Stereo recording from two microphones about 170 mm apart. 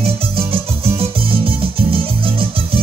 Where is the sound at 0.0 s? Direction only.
35° right (ahead or behind).